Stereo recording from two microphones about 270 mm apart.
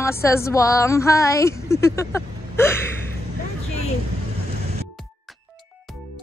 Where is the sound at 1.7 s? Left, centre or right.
Centre.